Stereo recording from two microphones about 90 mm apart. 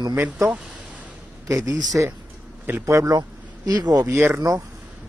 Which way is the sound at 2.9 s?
35° right (ahead or behind).